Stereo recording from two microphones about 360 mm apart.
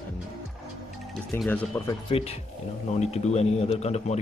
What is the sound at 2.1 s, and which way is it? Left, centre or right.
Speech, centre.